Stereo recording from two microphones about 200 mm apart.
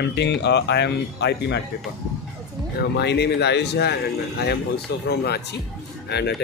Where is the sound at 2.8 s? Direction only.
55° left (ahead or behind).